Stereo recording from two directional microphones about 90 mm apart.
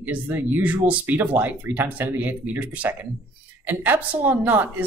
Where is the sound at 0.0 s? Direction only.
20° right (ahead or behind).